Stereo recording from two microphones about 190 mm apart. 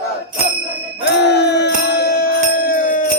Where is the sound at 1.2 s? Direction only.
65° left (ahead or behind); by 3.1 s 45° left (ahead or behind).